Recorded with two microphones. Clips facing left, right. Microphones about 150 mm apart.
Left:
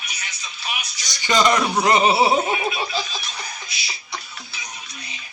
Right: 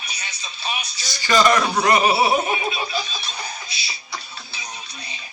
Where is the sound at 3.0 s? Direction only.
30° right (ahead or behind).